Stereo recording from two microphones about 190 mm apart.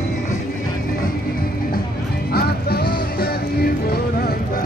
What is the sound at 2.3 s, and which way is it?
Music, 55° left (ahead or behind).